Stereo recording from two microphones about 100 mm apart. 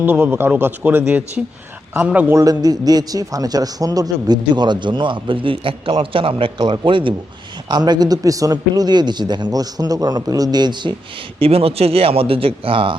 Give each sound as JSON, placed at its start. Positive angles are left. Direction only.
{"t": 0.0, "sound": "a man's voice", "side_deg": -20}
{"t": 2.3, "sound": "a man's voice", "side_deg": -40}
{"t": 7.7, "sound": "a man's voice", "side_deg": -45}
{"t": 11.3, "sound": "speech", "side_deg": -75}